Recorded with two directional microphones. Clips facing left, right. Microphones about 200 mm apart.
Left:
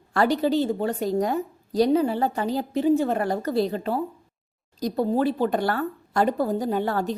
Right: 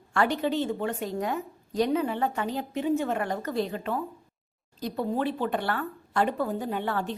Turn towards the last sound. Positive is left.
turn(degrees=40)  # may be behind; listen again after turning